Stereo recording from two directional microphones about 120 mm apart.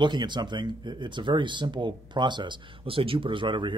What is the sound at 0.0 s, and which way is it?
Speech, 40° right (ahead or behind).